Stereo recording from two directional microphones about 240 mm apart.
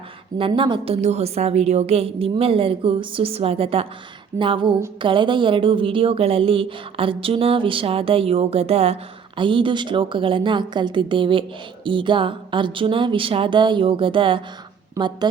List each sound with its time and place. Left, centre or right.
0.3 s a woman's voice: right